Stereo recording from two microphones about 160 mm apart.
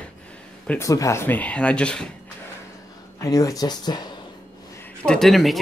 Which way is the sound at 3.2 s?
20° left (ahead or behind).